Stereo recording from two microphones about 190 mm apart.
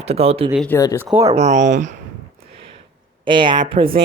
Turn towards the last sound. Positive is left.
turn(degrees=-30)  # may be behind; listen again after turning